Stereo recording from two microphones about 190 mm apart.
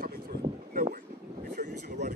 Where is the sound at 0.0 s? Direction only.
50° right (ahead or behind).